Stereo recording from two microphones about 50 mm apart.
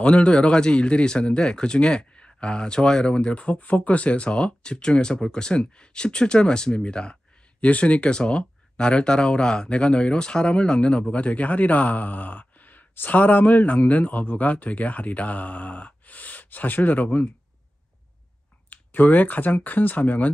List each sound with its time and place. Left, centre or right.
0.0 s speech: left
18.7 s speech: left